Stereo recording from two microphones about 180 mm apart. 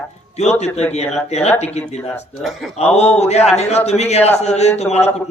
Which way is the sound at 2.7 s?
35° left (ahead or behind).